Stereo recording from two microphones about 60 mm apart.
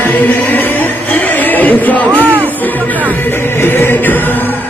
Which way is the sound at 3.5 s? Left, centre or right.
Left.